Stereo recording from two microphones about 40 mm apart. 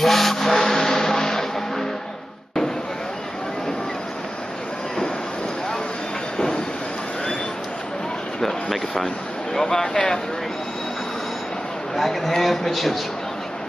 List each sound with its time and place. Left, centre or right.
0.0 s vehicle: centre
6.3 s train: centre
8.6 s a sound: centre
9.9 s speech: centre
11.9 s speech: centre